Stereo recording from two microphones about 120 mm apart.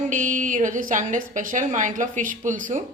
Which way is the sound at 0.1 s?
90° right.